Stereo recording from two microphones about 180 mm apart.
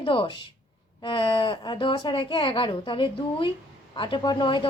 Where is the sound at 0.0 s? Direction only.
30° left (ahead or behind).